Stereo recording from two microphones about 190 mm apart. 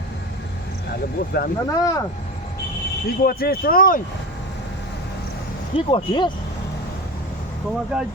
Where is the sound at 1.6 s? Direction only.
20° left (ahead or behind).